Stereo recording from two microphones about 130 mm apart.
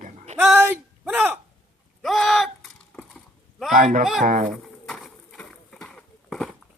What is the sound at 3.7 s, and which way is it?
Speech, 90° right.